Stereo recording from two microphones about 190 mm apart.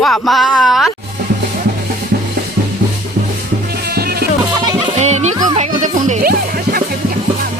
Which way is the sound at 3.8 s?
55° right (ahead or behind).